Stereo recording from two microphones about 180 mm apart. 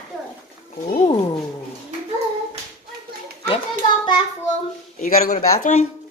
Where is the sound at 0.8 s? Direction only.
45° left (ahead or behind).